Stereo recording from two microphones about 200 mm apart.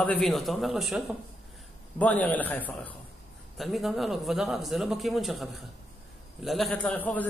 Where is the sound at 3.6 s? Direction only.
Centre (ahead or behind).